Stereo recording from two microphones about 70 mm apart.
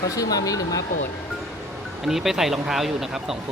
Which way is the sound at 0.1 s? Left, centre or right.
Left.